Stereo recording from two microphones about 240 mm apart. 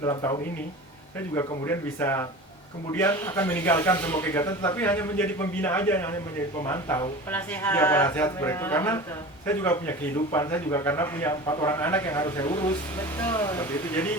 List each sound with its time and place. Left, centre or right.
0.0 s a man's voice: centre
1.4 s a man's voice: centre